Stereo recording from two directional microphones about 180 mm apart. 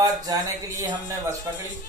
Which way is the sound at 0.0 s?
20° right (ahead or behind).